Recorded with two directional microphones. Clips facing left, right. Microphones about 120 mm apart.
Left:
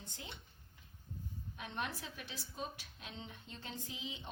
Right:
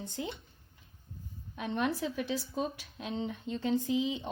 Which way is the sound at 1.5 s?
90° right.